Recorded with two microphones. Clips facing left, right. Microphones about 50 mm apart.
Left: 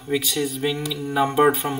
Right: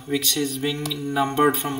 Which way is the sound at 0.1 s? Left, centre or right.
Centre.